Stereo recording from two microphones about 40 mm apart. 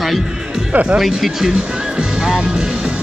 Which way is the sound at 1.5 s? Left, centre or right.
Right.